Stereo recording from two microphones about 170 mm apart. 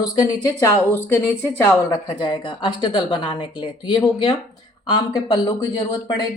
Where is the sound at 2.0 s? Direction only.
25° left (ahead or behind).